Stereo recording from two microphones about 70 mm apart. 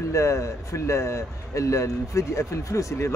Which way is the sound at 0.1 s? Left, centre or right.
Left.